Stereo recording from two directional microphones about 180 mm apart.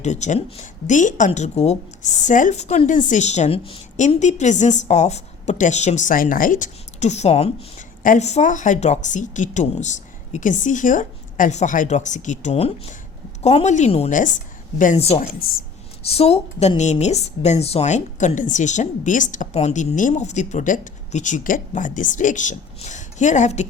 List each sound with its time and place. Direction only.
0.0 s speech: 40° left (ahead or behind)